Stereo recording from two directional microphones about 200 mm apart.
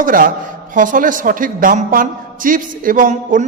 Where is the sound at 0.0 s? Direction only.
45° right (ahead or behind).